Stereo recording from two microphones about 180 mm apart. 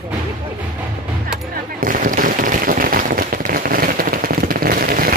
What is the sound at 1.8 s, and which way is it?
Firecracker, 50° right (ahead or behind).